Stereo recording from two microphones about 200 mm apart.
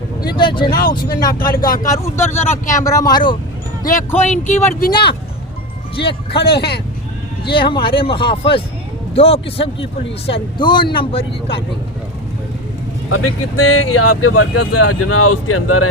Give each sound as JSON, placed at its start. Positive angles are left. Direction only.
{"t": 0.3, "sound": "a man's voice", "side_deg": 25}
{"t": 0.7, "sound": "speech", "side_deg": 50}
{"t": 1.8, "sound": "a man's voice", "side_deg": 15}
{"t": 4.3, "sound": "speech", "side_deg": 35}
{"t": 6.3, "sound": "speech", "side_deg": 55}
{"t": 7.5, "sound": "a man's voice", "side_deg": 25}
{"t": 13.1, "sound": "speech", "side_deg": 90}